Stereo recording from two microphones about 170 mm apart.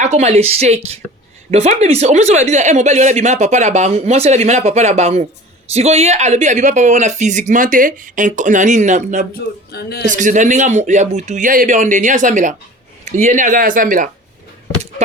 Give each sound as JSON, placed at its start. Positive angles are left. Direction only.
{"t": 0.0, "sound": "speech", "side_deg": -40}
{"t": 9.7, "sound": "a man's voice", "side_deg": 70}
{"t": 10.1, "sound": "speech", "side_deg": -50}